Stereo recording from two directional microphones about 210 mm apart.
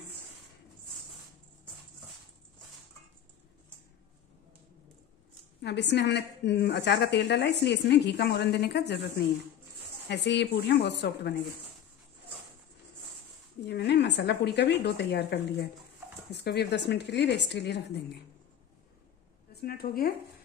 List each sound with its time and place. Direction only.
5.6 s a woman's voice: 55° left (ahead or behind)
10.0 s a woman's voice: 55° left (ahead or behind)
13.7 s a woman's voice: 55° left (ahead or behind)
19.5 s speech: 45° left (ahead or behind)